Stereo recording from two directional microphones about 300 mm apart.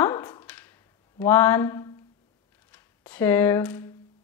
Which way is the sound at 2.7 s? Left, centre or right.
Centre.